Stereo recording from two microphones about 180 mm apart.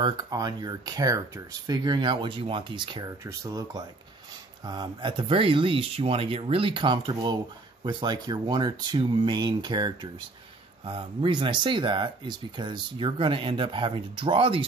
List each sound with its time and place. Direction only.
0.0 s speech: 25° right (ahead or behind)